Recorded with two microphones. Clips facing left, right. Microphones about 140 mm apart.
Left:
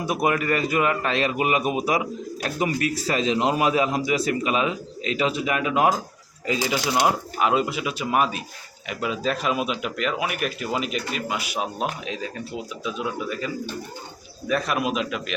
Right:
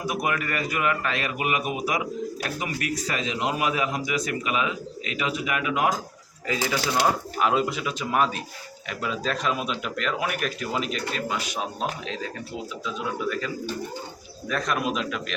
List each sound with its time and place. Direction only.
0.0 s a man's voice: 25° left (ahead or behind)
6.5 s speech: 20° left (ahead or behind)
7.3 s speech: 5° left (ahead or behind)
14.4 s speech: 10° left (ahead or behind)